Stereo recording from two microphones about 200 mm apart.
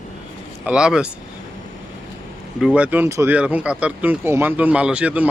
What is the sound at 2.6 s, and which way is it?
Speech, 5° right (ahead or behind).